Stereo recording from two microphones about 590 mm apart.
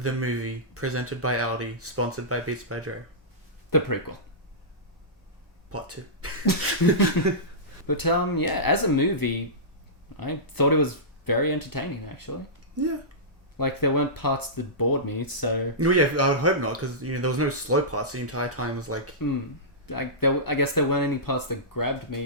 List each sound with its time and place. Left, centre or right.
0.0 s speech: right
3.7 s speech: left
5.7 s speech: right
7.2 s speech: left
12.8 s speech: right
13.6 s speech: left
15.8 s speech: right
19.9 s speech: left